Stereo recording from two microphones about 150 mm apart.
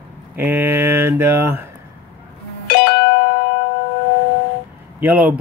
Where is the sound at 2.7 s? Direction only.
90° left.